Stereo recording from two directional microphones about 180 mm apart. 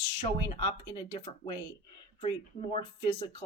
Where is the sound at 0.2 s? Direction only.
30° left (ahead or behind).